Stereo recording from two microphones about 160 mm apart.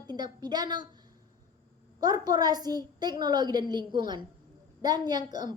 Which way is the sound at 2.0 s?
25° right (ahead or behind).